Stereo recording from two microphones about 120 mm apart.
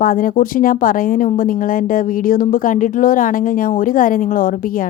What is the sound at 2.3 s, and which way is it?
Speech, 90° left.